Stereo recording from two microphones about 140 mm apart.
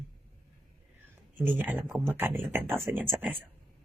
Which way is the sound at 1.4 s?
15° right (ahead or behind).